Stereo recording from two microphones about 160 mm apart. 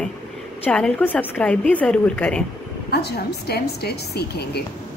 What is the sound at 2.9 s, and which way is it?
A woman's voice, 90° left.